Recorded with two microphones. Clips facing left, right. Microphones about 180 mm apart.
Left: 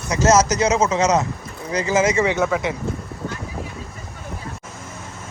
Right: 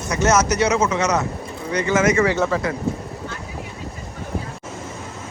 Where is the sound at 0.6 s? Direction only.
25° left (ahead or behind).